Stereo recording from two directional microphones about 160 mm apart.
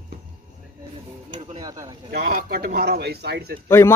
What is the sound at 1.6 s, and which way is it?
Speech, 25° right (ahead or behind).